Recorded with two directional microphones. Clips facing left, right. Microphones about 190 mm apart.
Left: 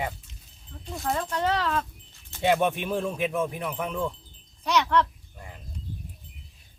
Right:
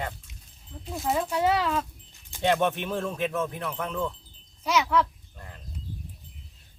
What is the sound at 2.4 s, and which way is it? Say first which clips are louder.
Speech: left 1 dB; 10° left (ahead or behind).